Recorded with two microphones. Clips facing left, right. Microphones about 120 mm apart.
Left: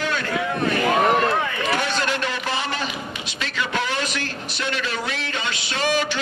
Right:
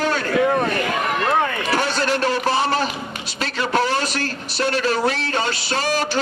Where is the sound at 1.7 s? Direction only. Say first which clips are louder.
Right 1 dB; 35° right (ahead or behind).